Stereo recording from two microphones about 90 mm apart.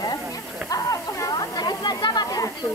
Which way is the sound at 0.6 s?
40° left (ahead or behind).